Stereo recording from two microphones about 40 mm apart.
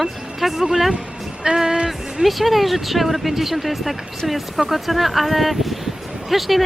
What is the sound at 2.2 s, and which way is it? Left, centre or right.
Speech, centre.